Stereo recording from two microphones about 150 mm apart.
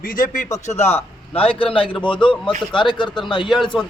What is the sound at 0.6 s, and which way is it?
A man's voice, 45° left (ahead or behind).